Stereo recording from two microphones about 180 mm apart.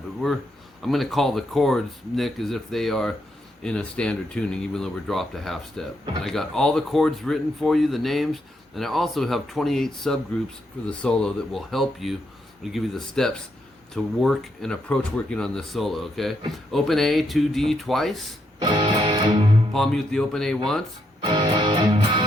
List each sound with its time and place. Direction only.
0.8 s speech: centre (ahead or behind)
18.6 s music: 25° right (ahead or behind)
19.7 s speech: centre (ahead or behind)
21.2 s music: 25° right (ahead or behind)